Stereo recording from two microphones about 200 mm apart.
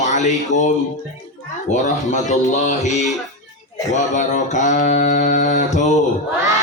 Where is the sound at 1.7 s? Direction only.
35° left (ahead or behind).